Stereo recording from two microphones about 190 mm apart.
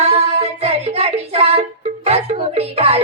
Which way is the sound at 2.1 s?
35° right (ahead or behind).